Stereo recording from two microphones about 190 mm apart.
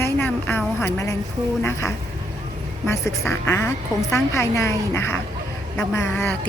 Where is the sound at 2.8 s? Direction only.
15° left (ahead or behind).